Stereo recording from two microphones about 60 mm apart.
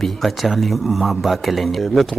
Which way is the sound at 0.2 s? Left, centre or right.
Centre.